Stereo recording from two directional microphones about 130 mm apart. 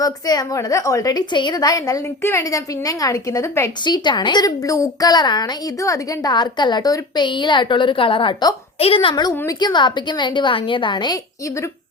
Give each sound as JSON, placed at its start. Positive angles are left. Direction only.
{"t": 0.0, "sound": "a woman's voice", "side_deg": 30}
{"t": 3.8, "sound": "a woman's voice", "side_deg": 35}